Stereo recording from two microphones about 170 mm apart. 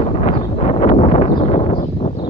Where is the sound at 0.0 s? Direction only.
35° left (ahead or behind).